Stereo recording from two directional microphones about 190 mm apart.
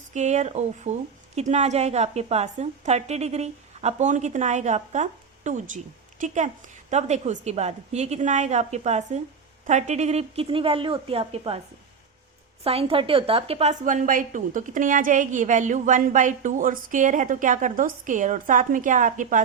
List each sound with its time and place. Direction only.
0.1 s a woman's voice: 35° right (ahead or behind)
12.6 s a woman's voice: 30° right (ahead or behind)